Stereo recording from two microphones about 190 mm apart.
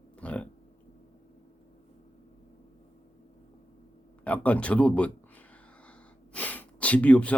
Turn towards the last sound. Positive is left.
turn(degrees=5)  # may be behind; listen again after turning